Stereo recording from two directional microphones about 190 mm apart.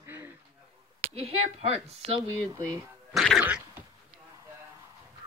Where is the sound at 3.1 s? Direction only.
Centre (ahead or behind).